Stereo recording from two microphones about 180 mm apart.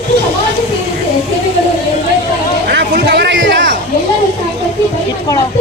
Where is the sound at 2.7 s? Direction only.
75° right (ahead or behind).